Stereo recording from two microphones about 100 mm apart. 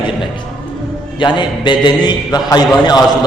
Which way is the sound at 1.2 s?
50° left (ahead or behind).